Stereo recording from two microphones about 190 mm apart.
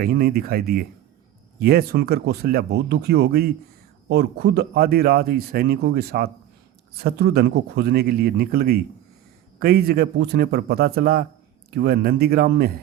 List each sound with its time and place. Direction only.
0.0 s speech: 55° right (ahead or behind)